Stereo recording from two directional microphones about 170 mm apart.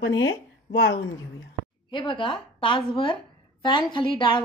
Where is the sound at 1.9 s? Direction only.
30° left (ahead or behind).